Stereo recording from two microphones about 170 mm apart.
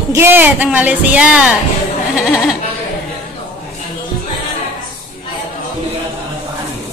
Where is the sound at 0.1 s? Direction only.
15° right (ahead or behind).